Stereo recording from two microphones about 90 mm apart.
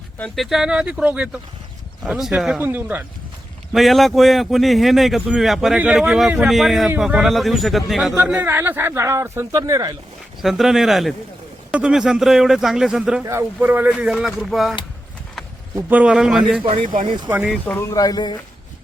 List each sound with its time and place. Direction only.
0.3 s speech: 5° right (ahead or behind)
2.6 s speech: 20° right (ahead or behind)
3.7 s speech: centre (ahead or behind)
8.4 s speech: 25° right (ahead or behind)
9.5 s speech: 40° right (ahead or behind)
10.4 s speech: 5° right (ahead or behind)
15.9 s speech: 15° right (ahead or behind)
16.6 s speech: 75° right (ahead or behind)
17.2 s speech: 20° right (ahead or behind)
17.8 s speech: 45° left (ahead or behind)